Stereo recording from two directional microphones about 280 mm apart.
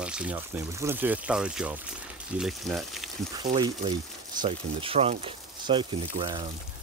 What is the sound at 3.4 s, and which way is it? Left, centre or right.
Speech, centre.